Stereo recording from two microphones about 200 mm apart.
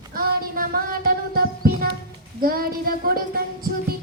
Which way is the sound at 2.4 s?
45° right (ahead or behind).